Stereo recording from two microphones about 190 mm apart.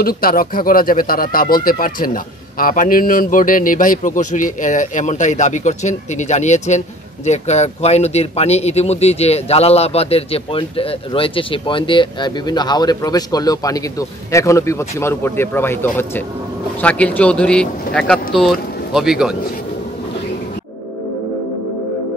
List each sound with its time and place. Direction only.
0.0 s a man's voice: 50° left (ahead or behind); by 19.3 s centre (ahead or behind)